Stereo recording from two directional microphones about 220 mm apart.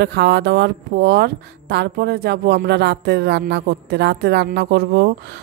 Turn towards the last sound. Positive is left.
turn(degrees=-45)  # may be behind; listen again after turning